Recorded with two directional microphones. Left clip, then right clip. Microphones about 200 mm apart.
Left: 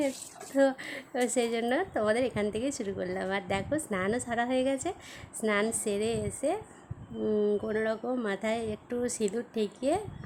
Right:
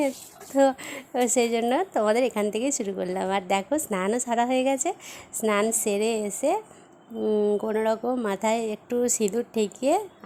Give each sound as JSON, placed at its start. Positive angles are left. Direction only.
{"t": 0.5, "sound": "a woman's voice", "side_deg": -15}